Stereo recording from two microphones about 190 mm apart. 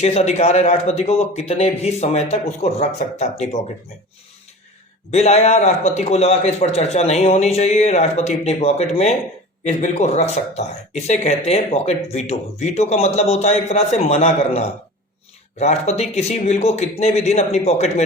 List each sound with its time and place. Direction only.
0.0 s a man's voice: 35° left (ahead or behind)
5.1 s a man's voice: 35° left (ahead or behind)